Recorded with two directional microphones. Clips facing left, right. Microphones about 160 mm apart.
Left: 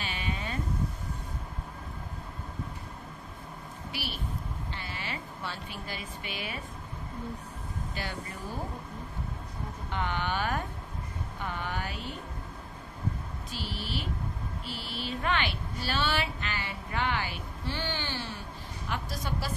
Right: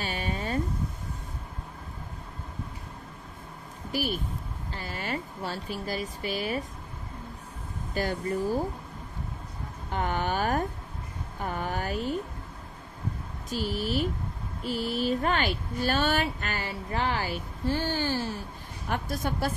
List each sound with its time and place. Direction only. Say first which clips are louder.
0.0 s a sound: right 4 dB; 40° right (ahead or behind)
3.9 s speech: right 8 dB; 45° right (ahead or behind)
7.9 s speech: right 12 dB; 40° right (ahead or behind)
9.8 s speech: right 4 dB; 45° right (ahead or behind)
13.5 s speech: right 8 dB; 45° right (ahead or behind)